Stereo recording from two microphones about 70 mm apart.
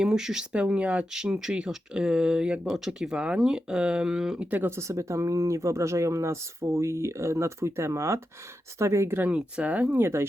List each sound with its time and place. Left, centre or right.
0.0 s speech: centre
4.5 s speech: right
4.8 s speech: right
9.2 s speech: centre
10.0 s speech: right